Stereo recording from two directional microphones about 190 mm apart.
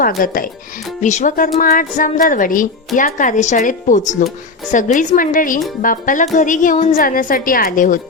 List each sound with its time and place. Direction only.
0.2 s a woman's voice: 50° left (ahead or behind)